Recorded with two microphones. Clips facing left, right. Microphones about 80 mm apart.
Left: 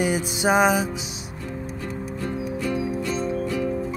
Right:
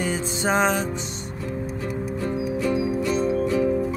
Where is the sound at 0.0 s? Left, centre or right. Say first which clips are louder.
Left 2 dB; centre.